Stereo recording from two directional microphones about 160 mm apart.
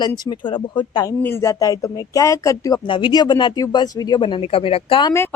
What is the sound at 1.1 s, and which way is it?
Speech, 15° left (ahead or behind).